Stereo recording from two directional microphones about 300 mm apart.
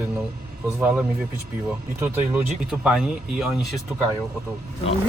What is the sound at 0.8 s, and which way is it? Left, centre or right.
Speech, centre.